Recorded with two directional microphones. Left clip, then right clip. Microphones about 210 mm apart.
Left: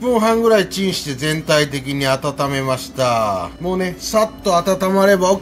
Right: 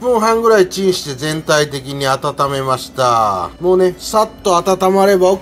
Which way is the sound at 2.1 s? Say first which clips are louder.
Right 5 dB; 40° right (ahead or behind).